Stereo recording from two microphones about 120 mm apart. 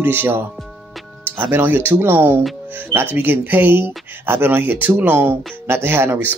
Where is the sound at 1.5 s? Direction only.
15° right (ahead or behind).